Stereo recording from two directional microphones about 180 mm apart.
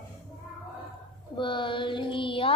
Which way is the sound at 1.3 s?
25° left (ahead or behind).